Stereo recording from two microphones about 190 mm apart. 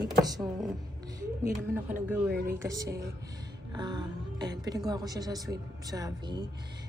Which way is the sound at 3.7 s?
25° right (ahead or behind).